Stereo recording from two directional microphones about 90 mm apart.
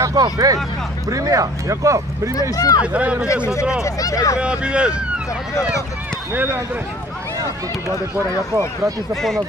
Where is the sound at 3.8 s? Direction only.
40° left (ahead or behind).